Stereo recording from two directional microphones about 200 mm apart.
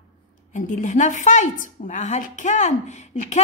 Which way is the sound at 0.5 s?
40° left (ahead or behind).